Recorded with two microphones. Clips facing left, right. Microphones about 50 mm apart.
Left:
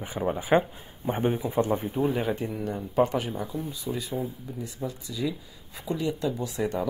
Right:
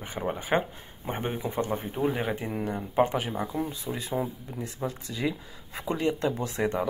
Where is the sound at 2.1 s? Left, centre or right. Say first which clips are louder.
Left 2 dB; centre.